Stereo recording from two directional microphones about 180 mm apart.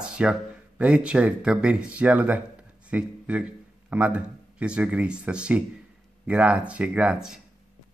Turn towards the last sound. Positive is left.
turn(degrees=-5)  # may be behind; listen again after turning